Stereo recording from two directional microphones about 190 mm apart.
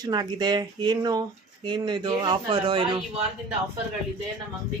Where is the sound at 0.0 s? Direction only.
20° right (ahead or behind).